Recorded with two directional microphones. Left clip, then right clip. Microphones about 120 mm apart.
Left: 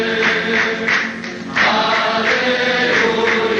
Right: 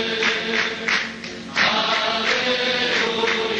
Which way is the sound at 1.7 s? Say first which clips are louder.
Left 5 dB; 35° right (ahead or behind).